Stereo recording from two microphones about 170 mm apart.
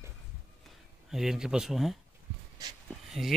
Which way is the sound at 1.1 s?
5° right (ahead or behind).